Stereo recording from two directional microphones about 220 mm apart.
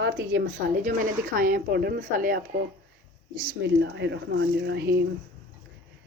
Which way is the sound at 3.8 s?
50° right (ahead or behind).